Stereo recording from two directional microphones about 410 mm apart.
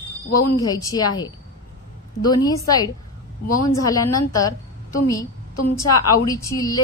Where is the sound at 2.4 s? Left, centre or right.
Centre.